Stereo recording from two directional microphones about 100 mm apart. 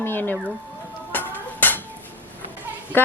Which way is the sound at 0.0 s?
20° left (ahead or behind).